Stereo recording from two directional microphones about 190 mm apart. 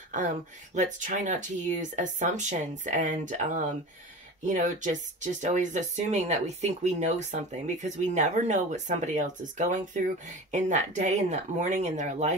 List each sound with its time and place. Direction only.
0.7 s speech: 40° right (ahead or behind)